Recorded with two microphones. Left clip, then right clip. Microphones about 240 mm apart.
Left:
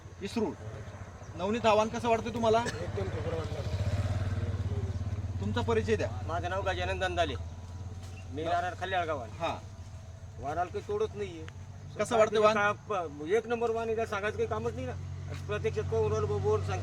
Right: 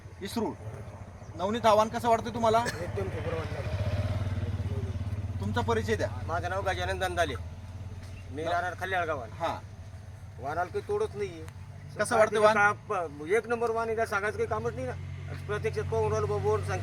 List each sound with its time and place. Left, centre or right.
0.2 s speech: centre
2.6 s vehicle: centre; by 4.4 s right
5.5 s speech: centre
6.2 s a man's voice: centre
8.4 s a man's voice: centre
10.4 s a man's voice: centre
11.9 s speech: centre
12.5 s a man's voice: centre